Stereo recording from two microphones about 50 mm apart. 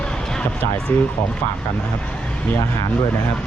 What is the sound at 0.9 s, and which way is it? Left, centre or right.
Speech, left.